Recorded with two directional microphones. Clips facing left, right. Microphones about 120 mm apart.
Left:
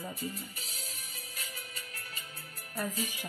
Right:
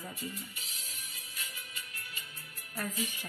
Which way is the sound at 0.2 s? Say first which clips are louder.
Left 3 dB; 40° left (ahead or behind).